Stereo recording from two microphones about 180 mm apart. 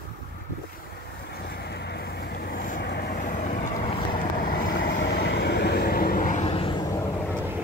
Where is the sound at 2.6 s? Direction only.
55° left (ahead or behind).